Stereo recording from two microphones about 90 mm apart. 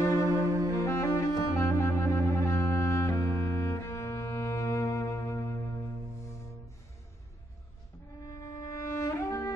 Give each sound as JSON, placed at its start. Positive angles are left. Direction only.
{"t": 0.1, "sound": "cello", "side_deg": -40}
{"t": 0.7, "sound": "saxophone", "side_deg": 35}
{"t": 8.3, "sound": "music", "side_deg": 35}